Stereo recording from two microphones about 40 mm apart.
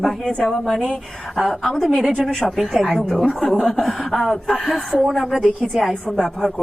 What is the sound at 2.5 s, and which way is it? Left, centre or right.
Speech, centre.